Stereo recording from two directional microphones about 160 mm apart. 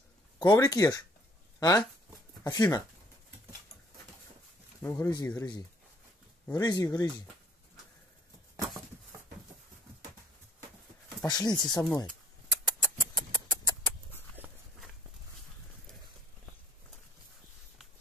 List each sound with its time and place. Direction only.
0.4 s speech: 25° left (ahead or behind)
4.8 s speech: 15° left (ahead or behind)
11.2 s a sound: 25° left (ahead or behind)
14.4 s horse: 10° right (ahead or behind)